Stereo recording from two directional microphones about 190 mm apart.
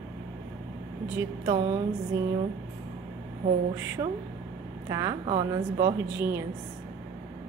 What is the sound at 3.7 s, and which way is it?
A woman's voice, 15° right (ahead or behind).